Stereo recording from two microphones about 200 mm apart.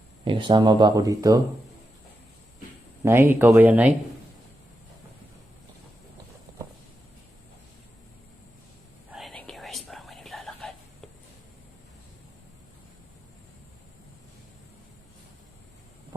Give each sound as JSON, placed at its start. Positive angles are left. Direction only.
{"t": 0.3, "sound": "speech", "side_deg": -25}
{"t": 3.0, "sound": "speech", "side_deg": -10}
{"t": 9.0, "sound": "whispering", "side_deg": 0}